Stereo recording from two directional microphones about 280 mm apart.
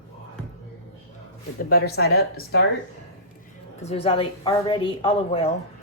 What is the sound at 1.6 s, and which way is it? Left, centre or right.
Speech, left.